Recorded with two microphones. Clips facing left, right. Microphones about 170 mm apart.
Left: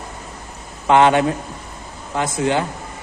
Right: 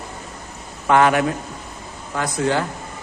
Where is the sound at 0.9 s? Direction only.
25° left (ahead or behind).